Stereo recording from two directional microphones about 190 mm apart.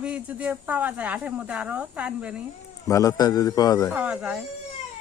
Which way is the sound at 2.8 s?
15° left (ahead or behind).